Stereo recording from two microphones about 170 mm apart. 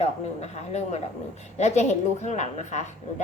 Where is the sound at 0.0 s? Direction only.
40° left (ahead or behind).